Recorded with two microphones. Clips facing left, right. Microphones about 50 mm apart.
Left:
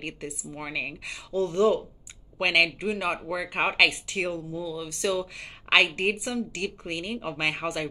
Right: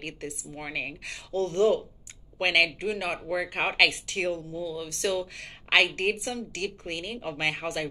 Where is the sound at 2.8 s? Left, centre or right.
Left.